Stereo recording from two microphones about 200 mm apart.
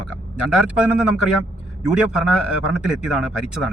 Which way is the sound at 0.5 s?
5° right (ahead or behind).